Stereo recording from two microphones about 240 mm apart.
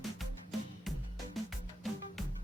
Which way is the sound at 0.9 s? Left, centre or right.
Centre.